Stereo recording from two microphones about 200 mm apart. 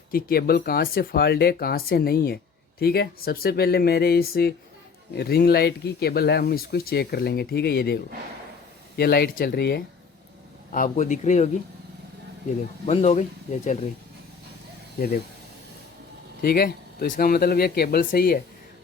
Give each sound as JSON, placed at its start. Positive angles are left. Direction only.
{"t": 0.1, "sound": "speech", "side_deg": 50}
{"t": 10.7, "sound": "speech", "side_deg": 40}
{"t": 12.8, "sound": "speech", "side_deg": 30}
{"t": 14.9, "sound": "speech", "side_deg": 50}
{"t": 16.4, "sound": "speech", "side_deg": 50}